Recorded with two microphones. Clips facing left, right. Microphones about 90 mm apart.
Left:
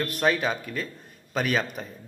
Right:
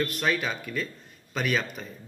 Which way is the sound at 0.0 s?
30° left (ahead or behind).